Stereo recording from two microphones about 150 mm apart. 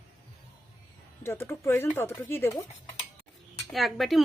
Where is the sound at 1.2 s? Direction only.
15° left (ahead or behind).